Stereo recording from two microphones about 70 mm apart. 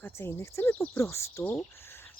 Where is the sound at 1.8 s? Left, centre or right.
Left.